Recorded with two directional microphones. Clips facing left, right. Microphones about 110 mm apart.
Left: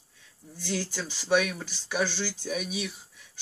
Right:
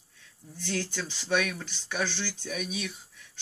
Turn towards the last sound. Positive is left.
turn(degrees=10)  # may be behind; listen again after turning